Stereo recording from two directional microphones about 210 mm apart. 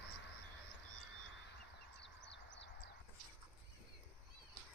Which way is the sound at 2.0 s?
55° left (ahead or behind).